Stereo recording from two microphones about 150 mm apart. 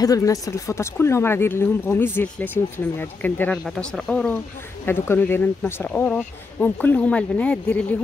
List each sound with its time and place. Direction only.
0.0 s speech: 25° left (ahead or behind); by 4.3 s 5° left (ahead or behind)
4.8 s speech: 15° left (ahead or behind)